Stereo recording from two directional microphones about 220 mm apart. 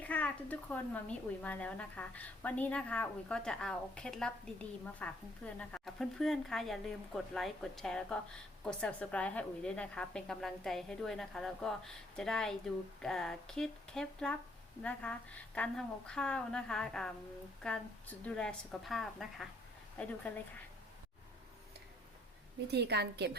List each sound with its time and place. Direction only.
0.0 s a woman's voice: 5° left (ahead or behind)
22.6 s a woman's voice: 50° right (ahead or behind)